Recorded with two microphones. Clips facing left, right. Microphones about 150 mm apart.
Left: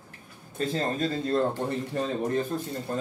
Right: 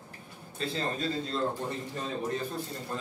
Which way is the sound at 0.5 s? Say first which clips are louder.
Left 5 dB; 45° left (ahead or behind).